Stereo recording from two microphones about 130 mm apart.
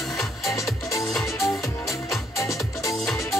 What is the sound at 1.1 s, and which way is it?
Music, centre (ahead or behind).